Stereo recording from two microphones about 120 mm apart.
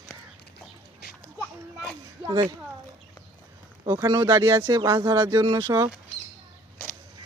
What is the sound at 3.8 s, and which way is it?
Speech, 30° right (ahead or behind).